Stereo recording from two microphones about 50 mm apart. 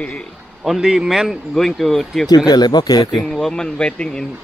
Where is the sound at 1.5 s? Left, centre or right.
Centre.